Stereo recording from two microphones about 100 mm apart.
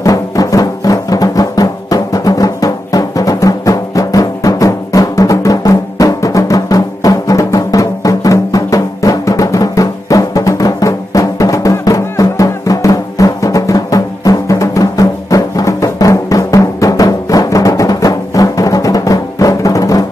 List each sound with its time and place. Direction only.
0.0 s music: 35° left (ahead or behind)